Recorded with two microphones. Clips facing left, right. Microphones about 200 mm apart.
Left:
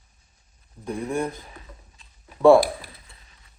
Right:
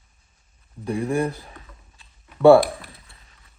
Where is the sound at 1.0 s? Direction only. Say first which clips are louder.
Right 3 dB; 35° right (ahead or behind).